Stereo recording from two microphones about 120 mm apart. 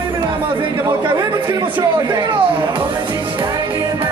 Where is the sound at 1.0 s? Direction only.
35° right (ahead or behind).